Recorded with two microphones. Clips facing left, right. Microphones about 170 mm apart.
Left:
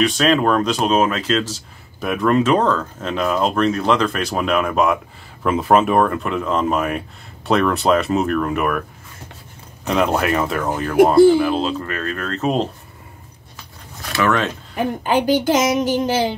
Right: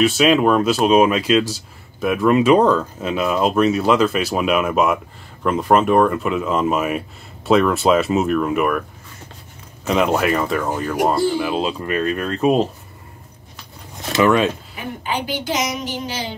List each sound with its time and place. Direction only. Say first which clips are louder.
0.0 s speech: right 2 dB; 10° right (ahead or behind)
9.8 s speech: right 1 dB; centre (ahead or behind)
11.4 s speech: left 1 dB; 10° right (ahead or behind)
14.0 s speech: right 4 dB; 20° right (ahead or behind)
14.8 s a woman's voice: left 9 dB; 45° left (ahead or behind)